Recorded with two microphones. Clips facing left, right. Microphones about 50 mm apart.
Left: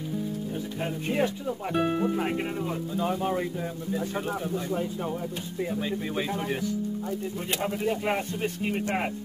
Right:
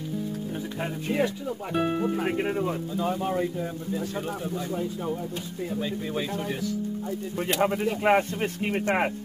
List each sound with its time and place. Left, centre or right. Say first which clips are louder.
1.7 s speech: even; centre
3.1 s speech: right 1 dB; centre
5.8 s speech: right 3 dB; centre
7.6 s speech: right 4 dB; right